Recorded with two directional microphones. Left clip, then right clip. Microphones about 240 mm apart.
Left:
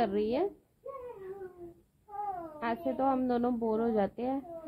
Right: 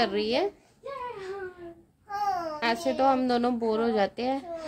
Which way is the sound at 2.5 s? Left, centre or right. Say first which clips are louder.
Right 4 dB; centre.